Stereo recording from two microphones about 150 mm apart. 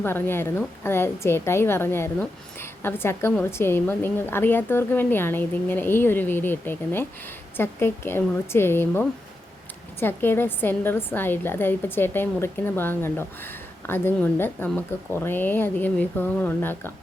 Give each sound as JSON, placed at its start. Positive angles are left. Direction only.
{"t": 0.0, "sound": "a woman's voice", "side_deg": 15}